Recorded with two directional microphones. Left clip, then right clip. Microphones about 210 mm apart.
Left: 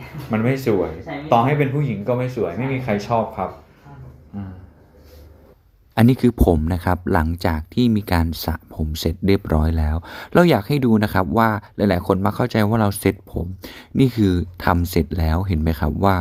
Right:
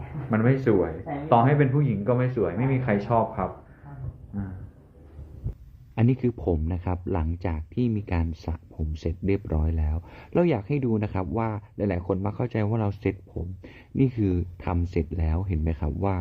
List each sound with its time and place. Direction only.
0.3 s speech: centre (ahead or behind)
5.9 s speech: 35° left (ahead or behind)